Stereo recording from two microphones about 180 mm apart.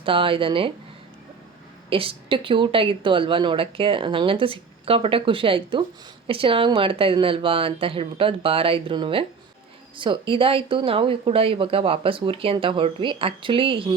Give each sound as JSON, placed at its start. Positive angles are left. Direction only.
{"t": 0.0, "sound": "a woman's voice", "side_deg": -30}
{"t": 1.9, "sound": "a woman's voice", "side_deg": -30}